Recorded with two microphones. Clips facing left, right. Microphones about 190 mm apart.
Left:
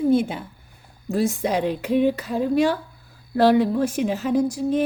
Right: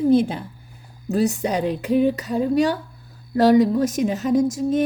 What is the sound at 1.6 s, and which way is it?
Speech, centre (ahead or behind).